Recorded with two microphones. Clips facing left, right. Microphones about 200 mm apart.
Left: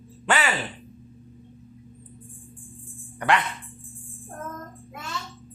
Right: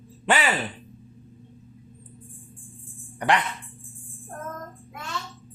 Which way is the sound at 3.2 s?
15° right (ahead or behind).